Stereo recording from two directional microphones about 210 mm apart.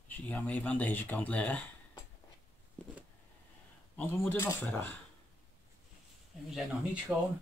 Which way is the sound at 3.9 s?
5° left (ahead or behind).